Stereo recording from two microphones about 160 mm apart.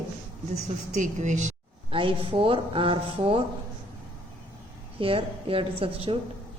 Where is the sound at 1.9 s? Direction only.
35° right (ahead or behind).